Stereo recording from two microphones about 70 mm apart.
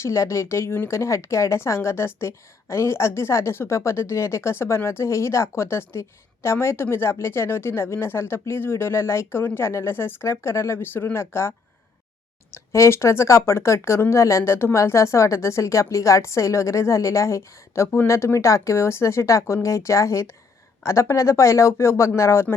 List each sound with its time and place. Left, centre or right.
0.0 s a woman's voice: left